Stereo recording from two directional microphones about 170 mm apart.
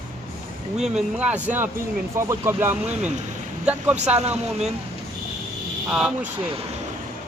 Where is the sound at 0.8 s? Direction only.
5° right (ahead or behind).